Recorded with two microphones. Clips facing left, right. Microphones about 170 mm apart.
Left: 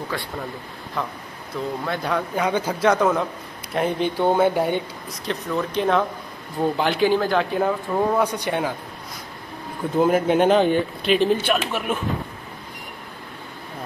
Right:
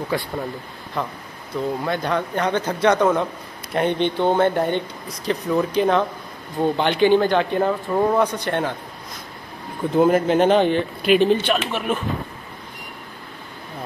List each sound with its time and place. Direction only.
1.0 s a man's voice: centre (ahead or behind)
9.9 s a man's voice: 5° left (ahead or behind)